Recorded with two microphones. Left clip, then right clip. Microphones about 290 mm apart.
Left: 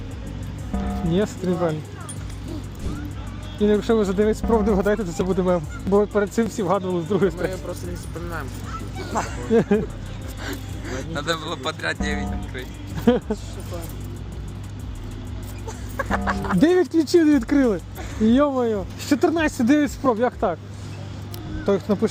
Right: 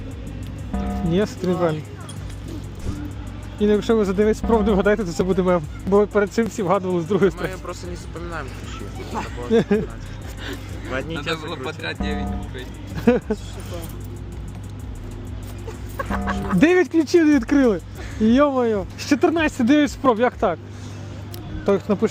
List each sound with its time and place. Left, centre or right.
0.7 s speech: centre
3.6 s speech: centre
9.1 s a man's voice: centre
9.5 s speech: centre
11.3 s a man's voice: centre
13.1 s speech: centre
16.0 s chicken: left
16.6 s speech: centre
21.7 s speech: centre